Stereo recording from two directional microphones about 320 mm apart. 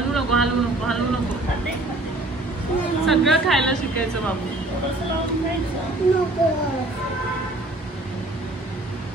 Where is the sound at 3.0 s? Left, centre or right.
Centre.